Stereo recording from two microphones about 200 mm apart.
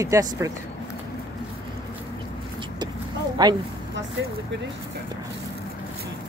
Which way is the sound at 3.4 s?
20° right (ahead or behind).